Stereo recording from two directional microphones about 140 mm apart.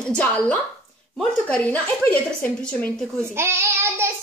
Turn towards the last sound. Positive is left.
turn(degrees=-20)  # may be behind; listen again after turning